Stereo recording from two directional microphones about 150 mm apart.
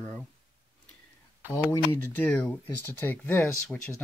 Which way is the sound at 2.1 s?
10° left (ahead or behind).